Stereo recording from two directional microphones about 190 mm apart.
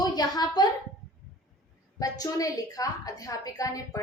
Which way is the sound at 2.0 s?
20° left (ahead or behind).